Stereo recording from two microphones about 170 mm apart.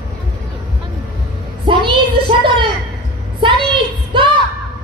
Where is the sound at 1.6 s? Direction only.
30° right (ahead or behind).